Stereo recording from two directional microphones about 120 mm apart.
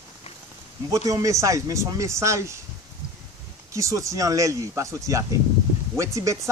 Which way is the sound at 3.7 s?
25° right (ahead or behind).